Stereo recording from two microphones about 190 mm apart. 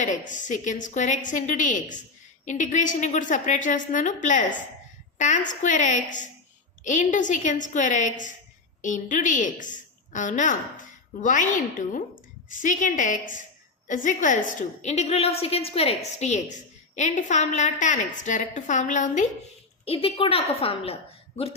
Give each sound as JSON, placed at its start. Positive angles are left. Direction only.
{"t": 0.0, "sound": "a woman's voice", "side_deg": 40}
{"t": 19.8, "sound": "a woman's voice", "side_deg": 30}